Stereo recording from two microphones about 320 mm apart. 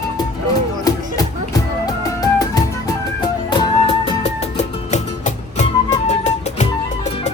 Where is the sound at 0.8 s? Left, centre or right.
Centre.